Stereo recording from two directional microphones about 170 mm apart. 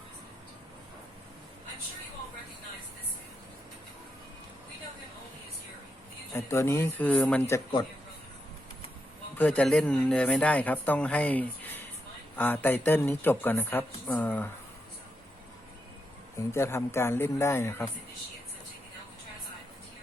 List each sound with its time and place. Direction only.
6.3 s speech: 15° left (ahead or behind)
9.4 s speech: 10° left (ahead or behind)
16.4 s speech: 15° left (ahead or behind)